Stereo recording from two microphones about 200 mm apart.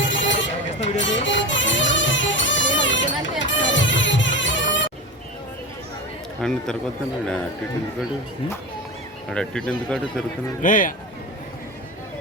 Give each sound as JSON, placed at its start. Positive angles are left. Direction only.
{"t": 0.0, "sound": "sheep", "side_deg": 65}
{"t": 0.9, "sound": "music", "side_deg": 65}
{"t": 6.4, "sound": "speech", "side_deg": 5}
{"t": 9.3, "sound": "speech", "side_deg": 5}
{"t": 10.6, "sound": "speech", "side_deg": 40}